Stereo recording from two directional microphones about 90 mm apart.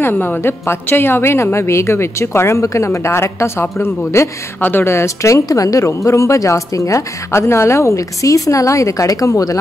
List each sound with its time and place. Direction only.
0.0 s a woman's voice: 25° left (ahead or behind); by 9.6 s 40° left (ahead or behind)